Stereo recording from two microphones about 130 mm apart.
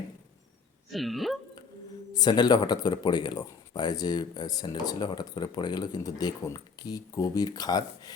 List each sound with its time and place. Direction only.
0.9 s speech: centre (ahead or behind)
2.1 s a man's voice: 30° left (ahead or behind)